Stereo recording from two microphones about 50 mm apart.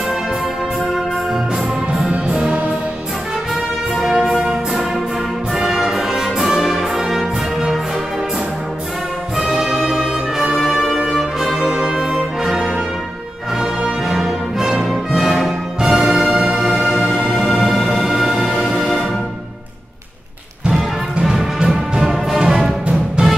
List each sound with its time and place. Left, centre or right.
0.9 s music: centre
2.2 s music: centre
4.0 s music: centre
9.4 s brass instrument: centre
13.6 s music: centre
20.6 s music: centre
23.2 s music: right